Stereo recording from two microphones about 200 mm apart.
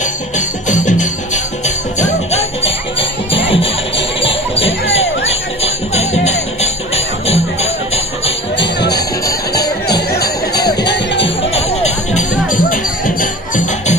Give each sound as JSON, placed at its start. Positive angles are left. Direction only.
{"t": 0.0, "sound": "music", "side_deg": 40}
{"t": 3.3, "sound": "music", "side_deg": 30}
{"t": 8.5, "sound": "music", "side_deg": 55}
{"t": 8.9, "sound": "music", "side_deg": 20}
{"t": 11.5, "sound": "music", "side_deg": 30}
{"t": 12.4, "sound": "music", "side_deg": 40}